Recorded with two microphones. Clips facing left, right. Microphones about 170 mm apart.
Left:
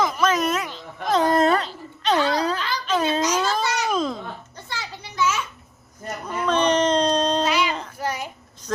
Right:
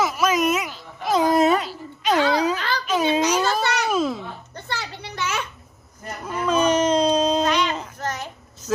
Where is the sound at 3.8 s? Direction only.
5° right (ahead or behind).